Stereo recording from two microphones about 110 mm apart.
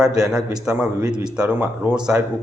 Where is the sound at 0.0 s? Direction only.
5° right (ahead or behind).